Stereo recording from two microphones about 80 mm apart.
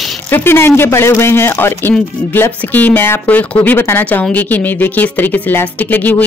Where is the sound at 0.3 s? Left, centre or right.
Left.